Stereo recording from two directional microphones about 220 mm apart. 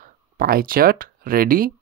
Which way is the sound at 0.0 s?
40° right (ahead or behind).